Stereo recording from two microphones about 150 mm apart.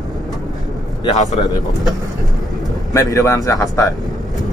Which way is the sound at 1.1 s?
50° left (ahead or behind).